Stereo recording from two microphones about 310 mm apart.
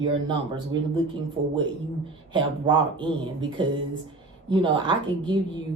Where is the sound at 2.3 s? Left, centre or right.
Centre.